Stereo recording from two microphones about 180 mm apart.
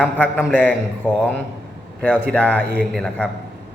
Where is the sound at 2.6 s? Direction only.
65° right (ahead or behind).